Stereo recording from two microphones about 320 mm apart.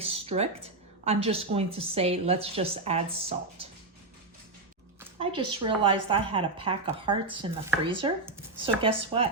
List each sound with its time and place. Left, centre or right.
0.0 s a woman's voice: centre
4.9 s a woman's voice: centre